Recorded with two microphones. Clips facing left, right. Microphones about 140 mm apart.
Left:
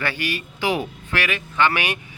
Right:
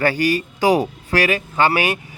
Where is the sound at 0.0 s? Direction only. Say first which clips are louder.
Right 9 dB; 40° right (ahead or behind).